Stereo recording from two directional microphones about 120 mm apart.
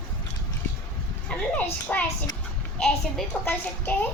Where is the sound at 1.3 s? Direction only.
10° left (ahead or behind).